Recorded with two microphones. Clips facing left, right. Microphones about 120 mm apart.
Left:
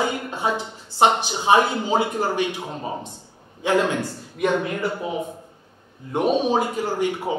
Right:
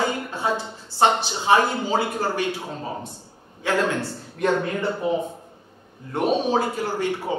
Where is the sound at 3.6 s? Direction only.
15° left (ahead or behind).